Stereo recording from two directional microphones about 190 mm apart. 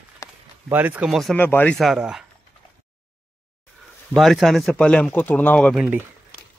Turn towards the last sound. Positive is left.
turn(degrees=-5)  # may be behind; listen again after turning